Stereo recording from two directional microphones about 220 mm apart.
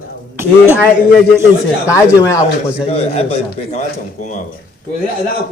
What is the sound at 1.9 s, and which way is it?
Speech, 15° left (ahead or behind).